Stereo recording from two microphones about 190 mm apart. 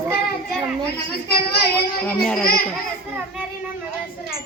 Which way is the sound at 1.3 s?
55° left (ahead or behind).